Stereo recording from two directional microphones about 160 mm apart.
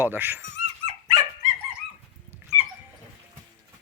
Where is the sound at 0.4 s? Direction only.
45° right (ahead or behind).